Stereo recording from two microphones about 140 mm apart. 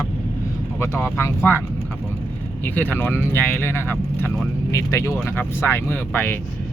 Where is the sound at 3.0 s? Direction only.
15° left (ahead or behind).